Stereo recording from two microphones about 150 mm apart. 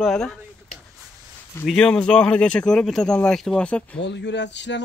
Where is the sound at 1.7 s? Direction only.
5° left (ahead or behind).